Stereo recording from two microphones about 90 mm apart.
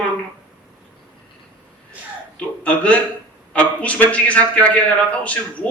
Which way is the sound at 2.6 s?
15° left (ahead or behind).